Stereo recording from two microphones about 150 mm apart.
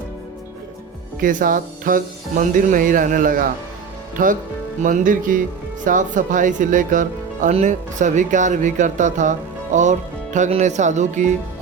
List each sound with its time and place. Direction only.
1.2 s speech: 65° right (ahead or behind)